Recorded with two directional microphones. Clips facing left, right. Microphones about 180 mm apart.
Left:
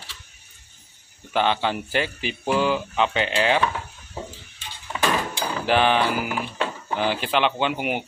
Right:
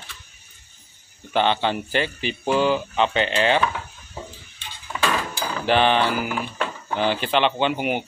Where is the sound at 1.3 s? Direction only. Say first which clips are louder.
Right 1 dB; 5° left (ahead or behind).